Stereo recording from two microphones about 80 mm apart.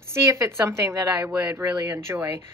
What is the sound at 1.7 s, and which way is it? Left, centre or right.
Speech, right.